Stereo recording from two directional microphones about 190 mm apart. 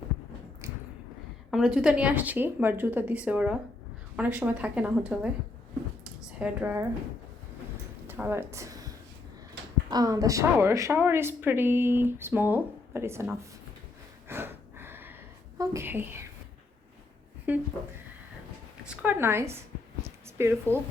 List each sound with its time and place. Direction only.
0.6 s a sound: 15° right (ahead or behind)
1.5 s a woman's voice: centre (ahead or behind)
6.4 s a woman's voice: 10° right (ahead or behind)
8.0 s speech: 10° right (ahead or behind)
9.9 s a woman's voice: 20° right (ahead or behind)
14.3 s a sound: 10° right (ahead or behind)
15.5 s a woman's voice: 15° right (ahead or behind)
17.5 s a woman's voice: 10° right (ahead or behind)
18.9 s a woman's voice: 10° right (ahead or behind)
20.1 s a sound: 15° right (ahead or behind)